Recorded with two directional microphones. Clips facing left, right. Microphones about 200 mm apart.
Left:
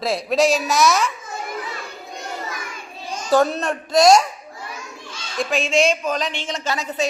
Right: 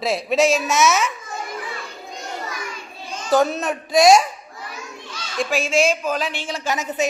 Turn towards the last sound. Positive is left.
turn(degrees=-15)  # may be behind; listen again after turning